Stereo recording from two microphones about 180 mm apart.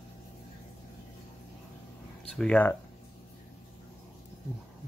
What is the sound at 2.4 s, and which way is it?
Speech, 5° left (ahead or behind).